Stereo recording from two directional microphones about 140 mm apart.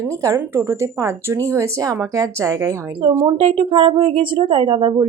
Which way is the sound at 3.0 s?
40° right (ahead or behind).